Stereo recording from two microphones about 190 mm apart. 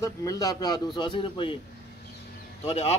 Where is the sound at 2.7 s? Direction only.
35° left (ahead or behind).